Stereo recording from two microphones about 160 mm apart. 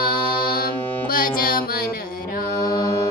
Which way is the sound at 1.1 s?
65° left (ahead or behind).